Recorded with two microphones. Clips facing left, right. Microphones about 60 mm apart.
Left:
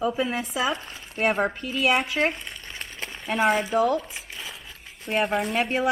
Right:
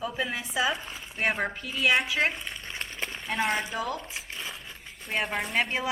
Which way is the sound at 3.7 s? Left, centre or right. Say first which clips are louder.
Left 10 dB; left.